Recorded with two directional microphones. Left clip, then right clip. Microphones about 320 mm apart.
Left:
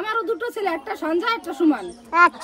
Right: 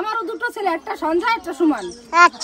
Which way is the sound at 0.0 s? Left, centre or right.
Centre.